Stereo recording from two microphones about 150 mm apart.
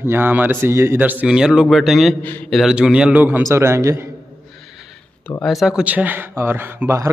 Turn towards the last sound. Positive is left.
turn(degrees=-15)  # may be behind; listen again after turning